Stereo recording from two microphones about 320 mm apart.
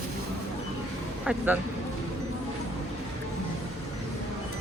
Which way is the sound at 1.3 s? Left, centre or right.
Centre.